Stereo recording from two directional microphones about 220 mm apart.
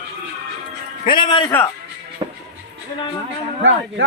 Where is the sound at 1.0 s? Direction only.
20° left (ahead or behind).